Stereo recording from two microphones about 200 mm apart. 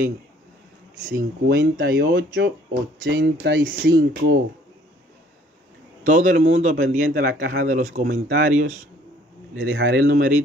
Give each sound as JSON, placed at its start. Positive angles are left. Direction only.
{"t": 1.1, "sound": "speech", "side_deg": -50}
{"t": 3.1, "sound": "speech", "side_deg": -65}
{"t": 4.0, "sound": "speech", "side_deg": -45}
{"t": 6.0, "sound": "a man's voice", "side_deg": -40}
{"t": 8.0, "sound": "speech", "side_deg": -50}
{"t": 9.6, "sound": "speech", "side_deg": -60}